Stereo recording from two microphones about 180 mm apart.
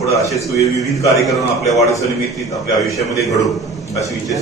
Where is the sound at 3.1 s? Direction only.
20° left (ahead or behind).